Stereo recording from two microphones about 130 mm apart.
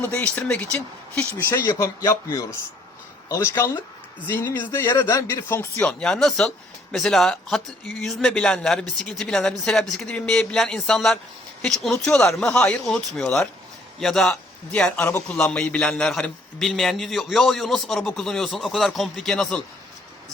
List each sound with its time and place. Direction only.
0.1 s a man's voice: 10° left (ahead or behind)
1.7 s a man's voice: 30° left (ahead or behind)
5.8 s a man's voice: 5° left (ahead or behind)